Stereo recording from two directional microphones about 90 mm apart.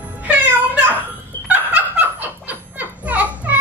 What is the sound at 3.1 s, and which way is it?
Music, 15° right (ahead or behind).